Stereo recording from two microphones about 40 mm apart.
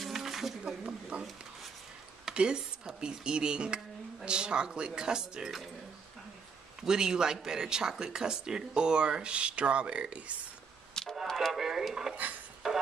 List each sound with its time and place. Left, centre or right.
0.0 s a sound: centre
1.1 s speech: right
2.3 s speech: right
6.8 s a man's voice: centre; by 10.3 s right
11.0 s a sound: centre
11.3 s speech: centre
12.6 s music: centre